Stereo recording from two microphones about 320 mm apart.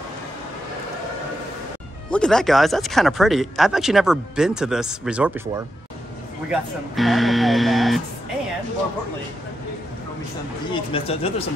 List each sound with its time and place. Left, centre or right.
2.0 s speech: centre
6.5 s speech: centre
10.7 s speech: centre